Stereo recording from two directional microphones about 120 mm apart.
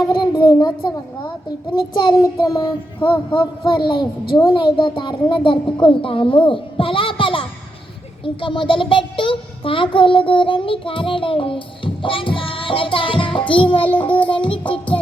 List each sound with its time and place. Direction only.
0.0 s child singing: 40° left (ahead or behind)
5.7 s a child's voice: 45° left (ahead or behind)
12.0 s music: 45° left (ahead or behind)
13.7 s child singing: 15° left (ahead or behind)
14.3 s speech: 45° left (ahead or behind)